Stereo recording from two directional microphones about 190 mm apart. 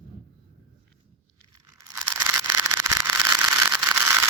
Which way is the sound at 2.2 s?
15° right (ahead or behind).